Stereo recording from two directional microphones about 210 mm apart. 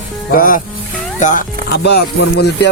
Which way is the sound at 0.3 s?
40° left (ahead or behind).